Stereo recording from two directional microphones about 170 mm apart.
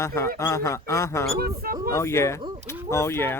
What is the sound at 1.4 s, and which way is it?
Speech, 65° right (ahead or behind).